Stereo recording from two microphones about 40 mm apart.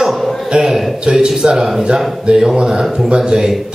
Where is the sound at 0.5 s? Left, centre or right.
Centre.